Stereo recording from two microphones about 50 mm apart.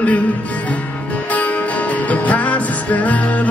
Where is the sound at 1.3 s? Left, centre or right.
Left.